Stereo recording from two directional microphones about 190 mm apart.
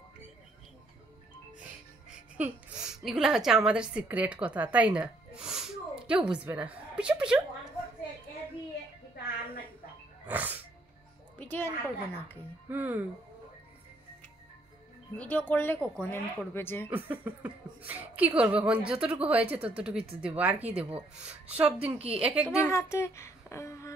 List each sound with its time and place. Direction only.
2.4 s a woman's voice: 10° right (ahead or behind)
10.2 s music: 10° right (ahead or behind)
11.3 s a woman's voice: 10° left (ahead or behind)
12.6 s speech: 10° right (ahead or behind)
15.1 s speech: 10° left (ahead or behind)
16.8 s speech: 10° right (ahead or behind)
21.6 s a woman's voice: 30° right (ahead or behind)
22.2 s speech: 5° right (ahead or behind)
22.6 s speech: 15° left (ahead or behind)